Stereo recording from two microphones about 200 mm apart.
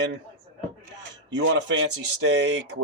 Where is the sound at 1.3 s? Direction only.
65° right (ahead or behind).